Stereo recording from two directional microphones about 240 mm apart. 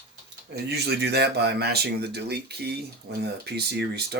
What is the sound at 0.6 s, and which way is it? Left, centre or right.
Speech, right.